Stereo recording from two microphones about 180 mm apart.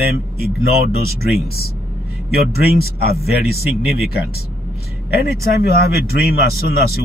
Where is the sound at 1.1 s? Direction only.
60° left (ahead or behind).